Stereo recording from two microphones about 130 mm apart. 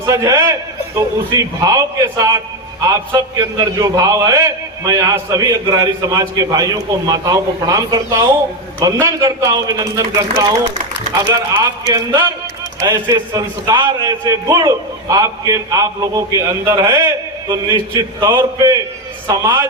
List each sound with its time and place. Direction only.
0.0 s a man's voice: 25° right (ahead or behind)
11.5 s a man's voice: 30° right (ahead or behind)